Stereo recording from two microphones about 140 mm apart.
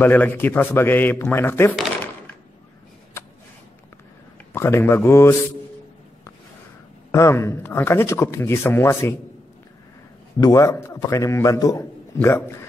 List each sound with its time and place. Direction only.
0.0 s a man's voice: 15° left (ahead or behind)
3.2 s a sound: 20° left (ahead or behind)
4.6 s speech: 20° left (ahead or behind)
7.1 s speech: 20° left (ahead or behind)
10.4 s speech: 25° left (ahead or behind)